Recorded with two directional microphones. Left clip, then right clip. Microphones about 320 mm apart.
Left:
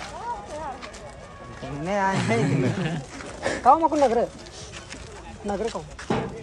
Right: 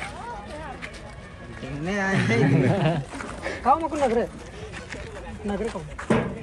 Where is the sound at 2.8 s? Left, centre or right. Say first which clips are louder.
Right 6 dB; centre.